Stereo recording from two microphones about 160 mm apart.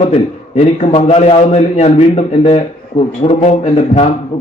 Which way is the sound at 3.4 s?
45° left (ahead or behind).